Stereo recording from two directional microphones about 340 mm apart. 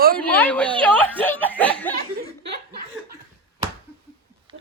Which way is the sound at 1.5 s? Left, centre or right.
Centre.